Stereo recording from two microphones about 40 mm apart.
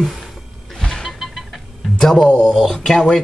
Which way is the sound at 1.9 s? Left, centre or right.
Centre.